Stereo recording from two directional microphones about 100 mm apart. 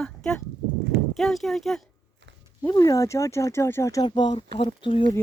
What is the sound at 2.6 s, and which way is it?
Speech, 35° left (ahead or behind).